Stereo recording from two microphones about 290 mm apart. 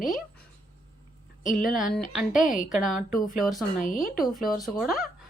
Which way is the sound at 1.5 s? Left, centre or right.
Left.